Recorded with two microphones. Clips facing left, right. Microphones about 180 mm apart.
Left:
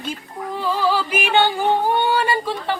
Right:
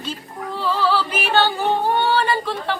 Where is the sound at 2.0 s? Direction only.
10° left (ahead or behind).